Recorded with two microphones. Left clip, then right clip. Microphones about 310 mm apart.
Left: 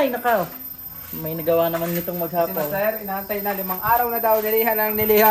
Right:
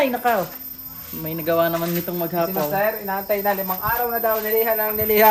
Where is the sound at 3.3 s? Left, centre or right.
Right.